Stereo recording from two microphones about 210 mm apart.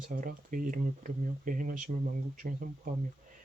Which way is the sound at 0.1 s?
40° right (ahead or behind).